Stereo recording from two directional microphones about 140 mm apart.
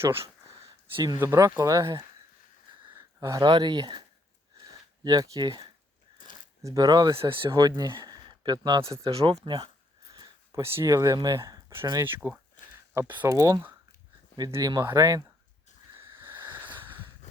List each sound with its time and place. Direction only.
0.9 s speech: 30° right (ahead or behind)
1.2 s speech: 20° right (ahead or behind)
2.9 s a sound: 20° right (ahead or behind)
3.5 s speech: 30° right (ahead or behind)
4.6 s a sound: 25° right (ahead or behind)
6.6 s speech: 25° right (ahead or behind)
8.8 s speech: 20° right (ahead or behind)
9.4 s speech: 35° right (ahead or behind)
10.1 s speech: 20° right (ahead or behind)
16.0 s a sound: 15° right (ahead or behind)